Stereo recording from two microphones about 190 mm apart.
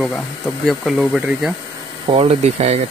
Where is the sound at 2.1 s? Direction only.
35° right (ahead or behind).